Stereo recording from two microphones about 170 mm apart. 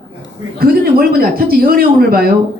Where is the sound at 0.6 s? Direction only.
60° right (ahead or behind).